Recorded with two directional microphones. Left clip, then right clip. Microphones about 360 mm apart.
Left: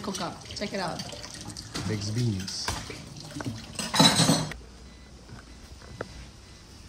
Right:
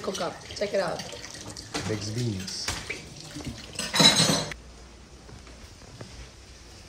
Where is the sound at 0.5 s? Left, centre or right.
Centre.